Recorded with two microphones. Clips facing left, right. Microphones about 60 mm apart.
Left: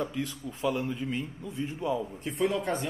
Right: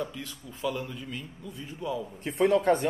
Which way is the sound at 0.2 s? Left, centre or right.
Left.